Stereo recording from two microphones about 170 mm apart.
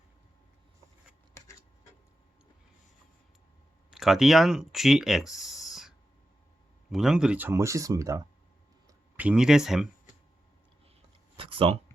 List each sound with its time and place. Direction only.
1.3 s a sound: 15° left (ahead or behind)
3.9 s speech: centre (ahead or behind)
6.9 s speech: 5° right (ahead or behind); by 8.2 s 20° right (ahead or behind)
9.1 s speech: 5° right (ahead or behind)
11.3 s speech: 35° right (ahead or behind)